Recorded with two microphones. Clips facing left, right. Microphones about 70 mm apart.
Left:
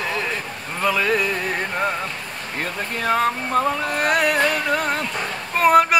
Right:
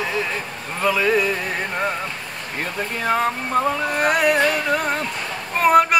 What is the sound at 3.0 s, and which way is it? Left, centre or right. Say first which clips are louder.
Music: left 1 dB; centre.